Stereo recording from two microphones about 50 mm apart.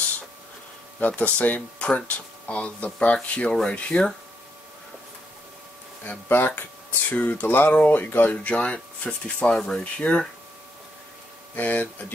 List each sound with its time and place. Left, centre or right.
0.9 s speech: left
6.2 s speech: left
7.1 s speech: left
8.5 s speech: centre
9.9 s speech: left
11.5 s speech: left